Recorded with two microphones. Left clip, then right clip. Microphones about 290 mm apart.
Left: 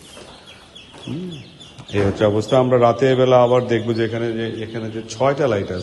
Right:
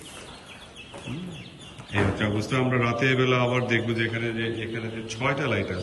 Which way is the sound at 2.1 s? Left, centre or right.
Centre.